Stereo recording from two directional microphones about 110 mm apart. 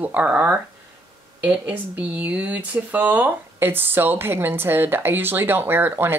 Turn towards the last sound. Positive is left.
turn(degrees=-20)  # may be behind; listen again after turning